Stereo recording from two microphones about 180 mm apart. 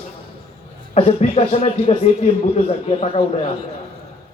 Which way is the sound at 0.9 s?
35° left (ahead or behind).